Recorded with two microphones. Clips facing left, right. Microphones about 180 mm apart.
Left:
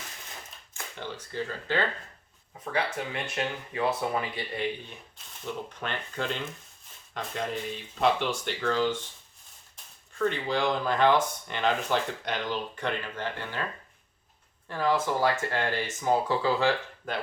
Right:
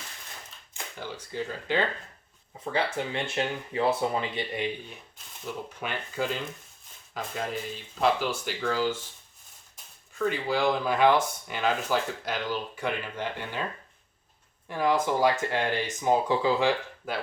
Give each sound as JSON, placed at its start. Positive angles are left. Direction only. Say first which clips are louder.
{"t": 0.7, "sound": "speech", "louder": "even", "side_deg": -10}
{"t": 2.7, "sound": "speech", "louder": "right 2 dB", "side_deg": -25}
{"t": 5.6, "sound": "speech", "louder": "right 1 dB", "side_deg": -10}
{"t": 10.2, "sound": "speech", "louder": "right 1 dB", "side_deg": -5}
{"t": 14.7, "sound": "speech", "louder": "right 1 dB", "side_deg": -15}